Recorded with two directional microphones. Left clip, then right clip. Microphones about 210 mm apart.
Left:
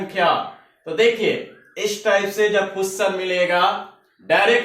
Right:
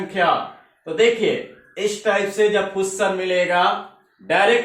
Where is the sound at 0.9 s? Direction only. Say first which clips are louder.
Even; 15° left (ahead or behind).